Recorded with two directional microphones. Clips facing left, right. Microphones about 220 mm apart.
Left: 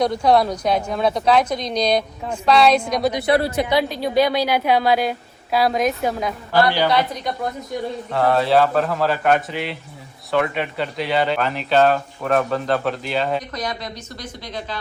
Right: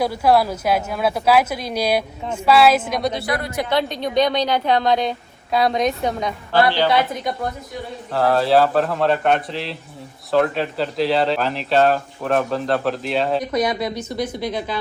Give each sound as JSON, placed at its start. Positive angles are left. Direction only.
{"t": 0.0, "sound": "speech", "side_deg": -5}
{"t": 3.1, "sound": "speech", "side_deg": 15}
{"t": 3.3, "sound": "a man's voice", "side_deg": 30}
{"t": 3.7, "sound": "speech", "side_deg": 5}
{"t": 8.1, "sound": "speech", "side_deg": 0}